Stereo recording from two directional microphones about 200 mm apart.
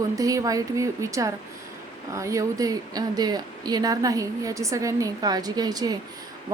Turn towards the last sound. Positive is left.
turn(degrees=-20)  # may be behind; listen again after turning